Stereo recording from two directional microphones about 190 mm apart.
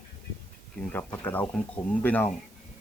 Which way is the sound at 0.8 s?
10° left (ahead or behind).